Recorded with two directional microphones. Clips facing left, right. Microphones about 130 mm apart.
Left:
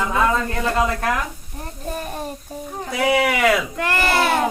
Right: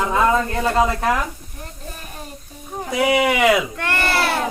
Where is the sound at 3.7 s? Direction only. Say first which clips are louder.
Left 2 dB; 15° left (ahead or behind).